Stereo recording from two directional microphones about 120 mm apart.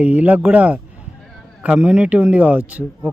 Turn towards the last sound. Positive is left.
turn(degrees=-10)  # may be behind; listen again after turning